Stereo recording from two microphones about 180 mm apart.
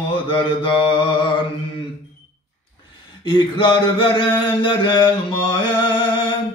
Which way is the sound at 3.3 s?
25° left (ahead or behind).